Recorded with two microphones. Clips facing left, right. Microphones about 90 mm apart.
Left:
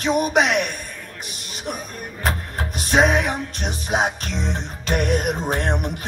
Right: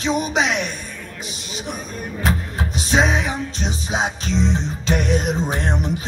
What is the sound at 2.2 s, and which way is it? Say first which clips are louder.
Music: right 2 dB; 50° left (ahead or behind).